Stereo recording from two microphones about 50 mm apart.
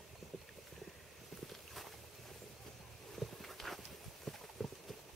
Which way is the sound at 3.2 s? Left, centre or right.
Centre.